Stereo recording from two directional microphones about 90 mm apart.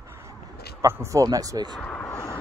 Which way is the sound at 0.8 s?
30° right (ahead or behind).